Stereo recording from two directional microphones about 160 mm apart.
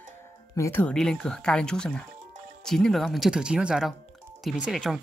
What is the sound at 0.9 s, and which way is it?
Speech, 5° left (ahead or behind).